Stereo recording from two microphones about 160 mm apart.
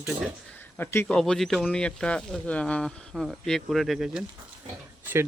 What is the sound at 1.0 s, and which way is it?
Speech, 5° left (ahead or behind).